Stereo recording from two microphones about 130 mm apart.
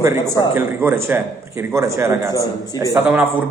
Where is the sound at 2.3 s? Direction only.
30° left (ahead or behind).